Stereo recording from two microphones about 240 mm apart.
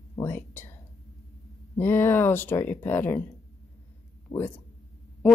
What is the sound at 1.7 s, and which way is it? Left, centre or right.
Speech, centre.